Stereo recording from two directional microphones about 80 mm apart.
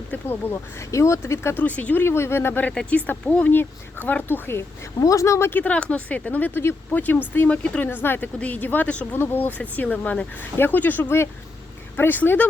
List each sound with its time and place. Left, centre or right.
0.1 s speech: left
0.8 s speech: left
1.6 s speech: centre
2.0 s speech: left
4.9 s speech: left
5.5 s speech: centre
8.0 s speech: left